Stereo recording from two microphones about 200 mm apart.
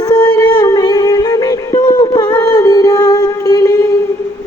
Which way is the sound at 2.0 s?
20° left (ahead or behind).